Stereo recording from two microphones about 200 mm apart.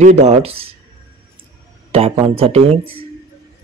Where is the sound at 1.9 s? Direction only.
30° right (ahead or behind).